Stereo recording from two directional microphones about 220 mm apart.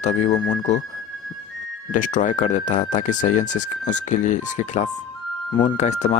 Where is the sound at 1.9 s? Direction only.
35° left (ahead or behind).